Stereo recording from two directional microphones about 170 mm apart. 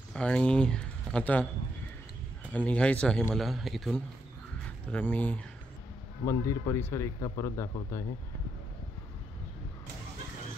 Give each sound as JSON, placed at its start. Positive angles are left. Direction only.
{"t": 0.1, "sound": "speech", "side_deg": 5}
{"t": 2.5, "sound": "a man's voice", "side_deg": 10}